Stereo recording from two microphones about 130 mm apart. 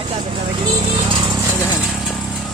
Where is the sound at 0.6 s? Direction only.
35° right (ahead or behind).